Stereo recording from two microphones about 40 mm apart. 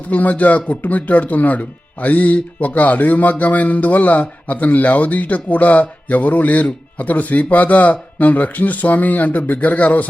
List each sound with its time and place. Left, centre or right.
0.1 s speech: left